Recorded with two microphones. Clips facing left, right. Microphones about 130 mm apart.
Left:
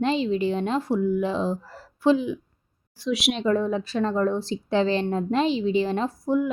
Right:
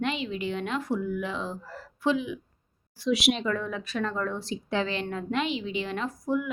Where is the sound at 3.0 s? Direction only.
Centre (ahead or behind).